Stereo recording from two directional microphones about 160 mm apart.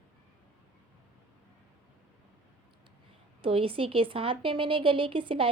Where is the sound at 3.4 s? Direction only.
35° right (ahead or behind).